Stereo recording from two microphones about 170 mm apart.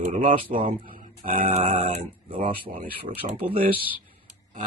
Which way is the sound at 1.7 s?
30° right (ahead or behind).